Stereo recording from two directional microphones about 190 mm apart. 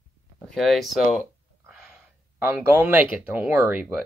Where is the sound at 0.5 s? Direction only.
Centre (ahead or behind).